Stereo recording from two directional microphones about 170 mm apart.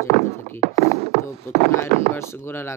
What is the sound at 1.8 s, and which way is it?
Speech, 15° left (ahead or behind).